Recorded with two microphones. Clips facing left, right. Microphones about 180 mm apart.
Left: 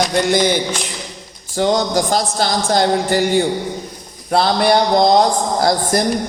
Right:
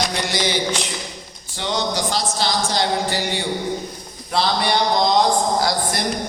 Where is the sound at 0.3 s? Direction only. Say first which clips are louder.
Left 6 dB; 50° left (ahead or behind).